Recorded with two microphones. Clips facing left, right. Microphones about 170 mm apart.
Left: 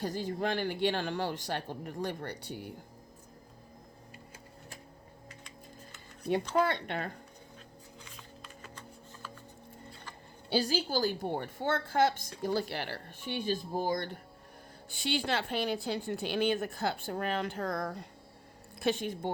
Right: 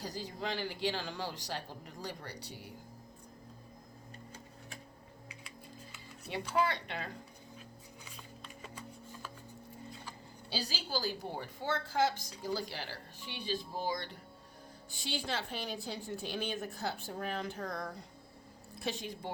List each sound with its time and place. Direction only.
0.0 s a woman's voice: 55° left (ahead or behind)
6.5 s a woman's voice: 55° left (ahead or behind)
10.5 s a woman's voice: 50° left (ahead or behind)
15.0 s a woman's voice: 65° left (ahead or behind)